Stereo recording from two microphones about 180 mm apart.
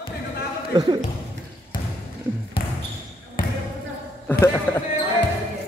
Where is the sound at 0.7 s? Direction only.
25° right (ahead or behind).